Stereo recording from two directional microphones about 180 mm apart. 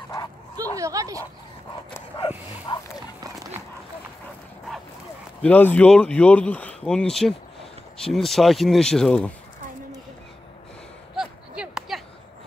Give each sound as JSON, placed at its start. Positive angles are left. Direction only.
{"t": 0.7, "sound": "speech", "side_deg": -20}
{"t": 2.1, "sound": "speech", "side_deg": 25}
{"t": 5.4, "sound": "speech", "side_deg": 10}
{"t": 11.1, "sound": "a sound", "side_deg": -5}